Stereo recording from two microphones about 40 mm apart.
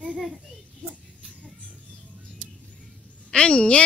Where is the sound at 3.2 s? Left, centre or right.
Left.